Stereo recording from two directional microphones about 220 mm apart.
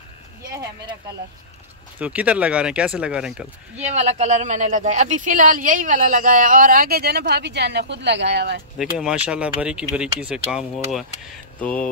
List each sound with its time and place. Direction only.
0.5 s a sound: 15° right (ahead or behind)
2.0 s speech: 5° right (ahead or behind)
3.8 s speech: 30° right (ahead or behind); by 8.6 s 50° right (ahead or behind)
8.7 s speech: 5° right (ahead or behind)